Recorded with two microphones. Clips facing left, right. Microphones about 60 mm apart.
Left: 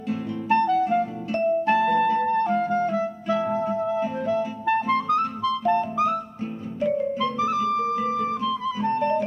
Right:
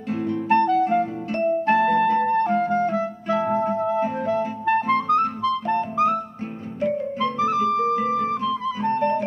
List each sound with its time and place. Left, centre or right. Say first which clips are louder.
0.1 s music: right 3 dB; right